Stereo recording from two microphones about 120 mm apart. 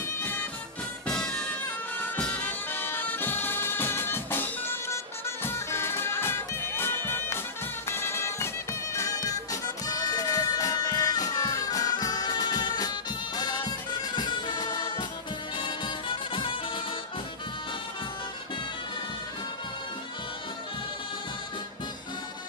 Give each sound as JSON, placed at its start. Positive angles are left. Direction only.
{"t": 0.2, "sound": "music", "side_deg": 15}
{"t": 1.0, "sound": "music", "side_deg": 5}
{"t": 2.0, "sound": "bagpipes", "side_deg": 10}
{"t": 7.9, "sound": "music", "side_deg": 20}